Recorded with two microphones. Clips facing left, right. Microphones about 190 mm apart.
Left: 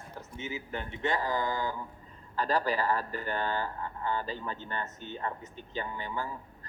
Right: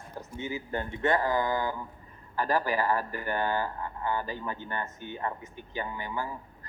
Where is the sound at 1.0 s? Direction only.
50° right (ahead or behind).